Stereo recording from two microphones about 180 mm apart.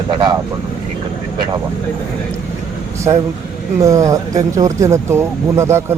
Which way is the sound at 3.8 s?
15° right (ahead or behind).